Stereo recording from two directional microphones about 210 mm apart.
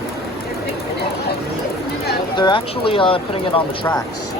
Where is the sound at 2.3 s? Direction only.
20° left (ahead or behind).